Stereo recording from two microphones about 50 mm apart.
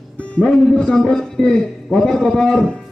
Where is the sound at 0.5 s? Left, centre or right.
Centre.